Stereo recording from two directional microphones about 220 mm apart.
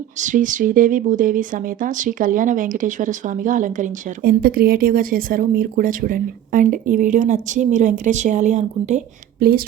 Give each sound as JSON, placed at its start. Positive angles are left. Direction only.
{"t": 0.2, "sound": "speech", "side_deg": -35}
{"t": 9.4, "sound": "speech", "side_deg": -45}